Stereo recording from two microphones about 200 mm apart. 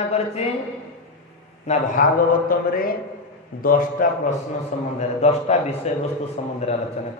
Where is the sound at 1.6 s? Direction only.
40° left (ahead or behind).